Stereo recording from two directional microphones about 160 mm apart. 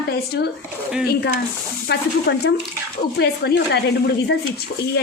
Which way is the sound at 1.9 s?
90° left.